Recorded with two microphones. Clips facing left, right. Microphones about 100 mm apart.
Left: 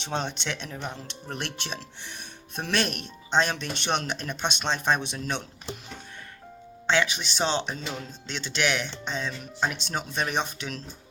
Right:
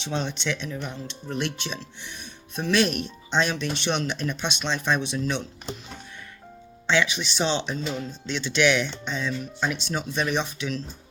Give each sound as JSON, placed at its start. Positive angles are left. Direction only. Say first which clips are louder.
{"t": 0.0, "sound": "speech", "louder": "right 2 dB", "side_deg": 50}
{"t": 6.8, "sound": "speech", "louder": "right 1 dB", "side_deg": 45}